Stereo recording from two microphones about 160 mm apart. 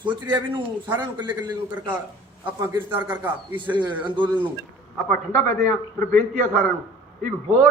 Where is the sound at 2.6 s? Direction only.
15° right (ahead or behind).